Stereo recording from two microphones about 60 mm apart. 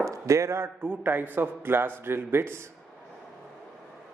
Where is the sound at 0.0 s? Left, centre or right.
Right.